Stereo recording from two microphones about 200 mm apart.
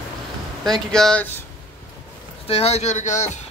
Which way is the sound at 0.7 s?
Centre (ahead or behind).